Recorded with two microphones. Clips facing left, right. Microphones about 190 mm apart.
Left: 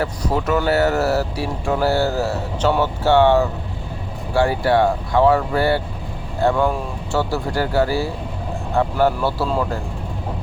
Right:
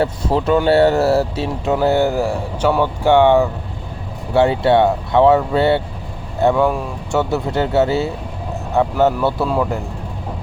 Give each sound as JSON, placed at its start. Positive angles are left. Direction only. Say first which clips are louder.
{"t": 0.0, "sound": "speech", "louder": "right 4 dB", "side_deg": -25}
{"t": 6.5, "sound": "speech", "louder": "right 3 dB", "side_deg": -5}
{"t": 7.1, "sound": "speech", "louder": "right 3 dB", "side_deg": -20}